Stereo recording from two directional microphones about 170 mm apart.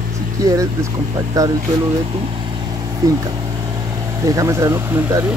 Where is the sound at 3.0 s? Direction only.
20° right (ahead or behind).